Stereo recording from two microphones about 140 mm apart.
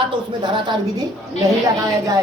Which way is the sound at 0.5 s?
30° right (ahead or behind).